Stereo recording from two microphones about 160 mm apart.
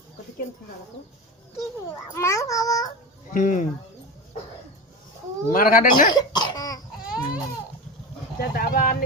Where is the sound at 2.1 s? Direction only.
20° left (ahead or behind).